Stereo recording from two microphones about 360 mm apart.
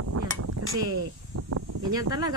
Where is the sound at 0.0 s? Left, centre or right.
Right.